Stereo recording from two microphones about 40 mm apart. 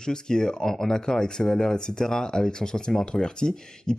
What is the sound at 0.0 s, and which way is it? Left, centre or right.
Speech, centre.